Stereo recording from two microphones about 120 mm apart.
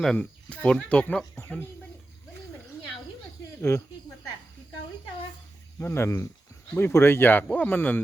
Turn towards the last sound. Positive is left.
turn(degrees=15)  # may be behind; listen again after turning